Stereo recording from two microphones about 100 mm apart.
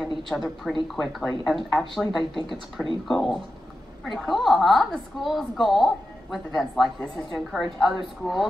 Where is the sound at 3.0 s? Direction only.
5° left (ahead or behind).